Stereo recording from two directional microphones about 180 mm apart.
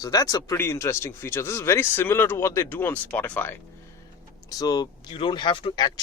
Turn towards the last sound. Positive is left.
turn(degrees=25)  # may be behind; listen again after turning